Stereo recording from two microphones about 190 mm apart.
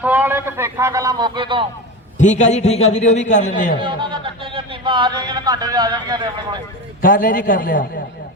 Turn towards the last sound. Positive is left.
turn(degrees=50)  # may be behind; listen again after turning